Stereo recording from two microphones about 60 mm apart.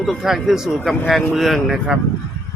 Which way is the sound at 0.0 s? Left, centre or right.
Centre.